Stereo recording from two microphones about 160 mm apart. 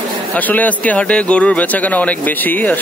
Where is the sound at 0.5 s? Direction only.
10° left (ahead or behind).